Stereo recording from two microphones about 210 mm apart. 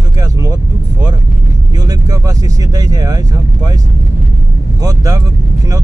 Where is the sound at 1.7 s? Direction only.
20° right (ahead or behind).